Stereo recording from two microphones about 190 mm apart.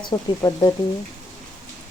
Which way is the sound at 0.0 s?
20° left (ahead or behind).